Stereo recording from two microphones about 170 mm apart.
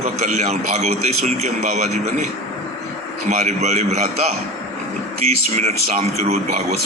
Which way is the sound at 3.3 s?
40° right (ahead or behind).